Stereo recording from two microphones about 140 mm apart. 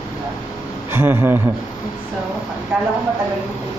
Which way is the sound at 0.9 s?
15° right (ahead or behind).